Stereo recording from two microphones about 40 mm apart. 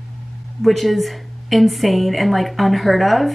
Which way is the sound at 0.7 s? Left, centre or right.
Centre.